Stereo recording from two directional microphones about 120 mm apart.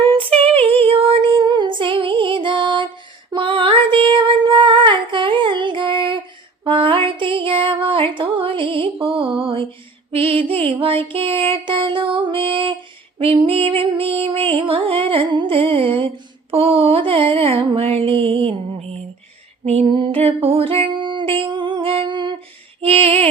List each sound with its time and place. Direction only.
0.0 s female singing: 45° right (ahead or behind)
0.6 s music: 50° right (ahead or behind)
3.3 s female singing: 45° right (ahead or behind)
6.7 s music: 45° right (ahead or behind)
22.8 s a sound: 55° right (ahead or behind)